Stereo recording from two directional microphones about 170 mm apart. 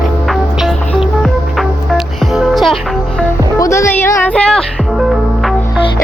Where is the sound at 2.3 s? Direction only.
Centre (ahead or behind).